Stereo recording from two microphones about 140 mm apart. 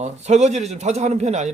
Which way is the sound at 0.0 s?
55° right (ahead or behind).